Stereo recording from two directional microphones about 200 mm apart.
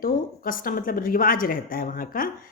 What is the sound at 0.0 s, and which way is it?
A woman's voice, 45° left (ahead or behind).